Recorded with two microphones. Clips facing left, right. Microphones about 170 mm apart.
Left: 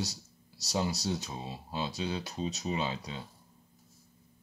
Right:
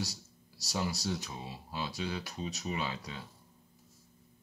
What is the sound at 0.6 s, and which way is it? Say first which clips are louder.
Speech: left 3 dB; 20° left (ahead or behind).